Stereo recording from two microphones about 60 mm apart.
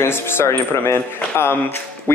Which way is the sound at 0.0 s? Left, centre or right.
Left.